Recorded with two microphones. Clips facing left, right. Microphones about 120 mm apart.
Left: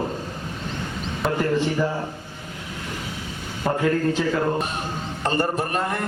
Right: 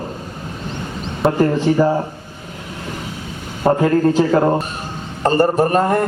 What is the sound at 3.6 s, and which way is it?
A man's voice, 40° right (ahead or behind).